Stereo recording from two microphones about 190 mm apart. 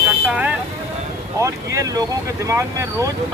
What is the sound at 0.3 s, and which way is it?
Vehicle, 5° right (ahead or behind).